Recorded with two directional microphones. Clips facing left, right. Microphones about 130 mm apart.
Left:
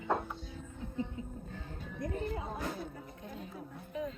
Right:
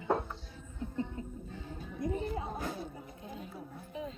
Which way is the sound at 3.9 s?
25° right (ahead or behind).